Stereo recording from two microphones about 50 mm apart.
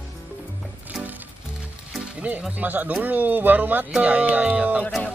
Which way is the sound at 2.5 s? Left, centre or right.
Right.